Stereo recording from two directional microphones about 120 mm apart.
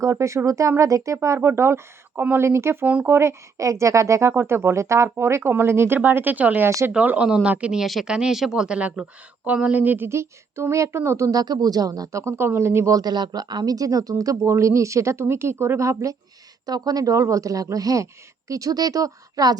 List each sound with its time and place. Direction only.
0.0 s speech: 25° right (ahead or behind)
6.7 s speech: 25° right (ahead or behind)
6.9 s speech: 10° right (ahead or behind); by 19.5 s 30° right (ahead or behind)